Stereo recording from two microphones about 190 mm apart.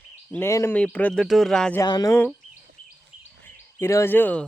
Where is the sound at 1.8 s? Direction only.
20° left (ahead or behind).